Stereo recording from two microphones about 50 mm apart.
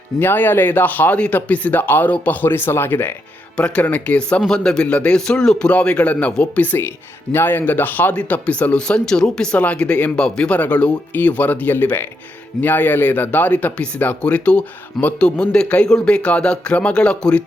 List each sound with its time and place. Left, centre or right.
0.2 s speech: left
1.8 s speech: left
2.0 s speech: left
3.8 s speech: left
4.4 s a man's voice: centre
5.7 s speech: left
7.3 s speech: left
8.1 s speech: left
10.5 s speech: left